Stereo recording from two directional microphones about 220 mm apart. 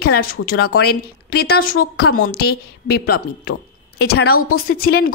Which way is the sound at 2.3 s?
45° left (ahead or behind).